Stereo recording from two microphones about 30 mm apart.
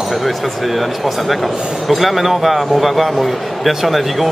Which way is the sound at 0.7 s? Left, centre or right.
Centre.